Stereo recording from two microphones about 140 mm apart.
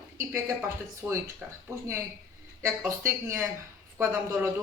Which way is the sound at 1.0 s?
10° right (ahead or behind).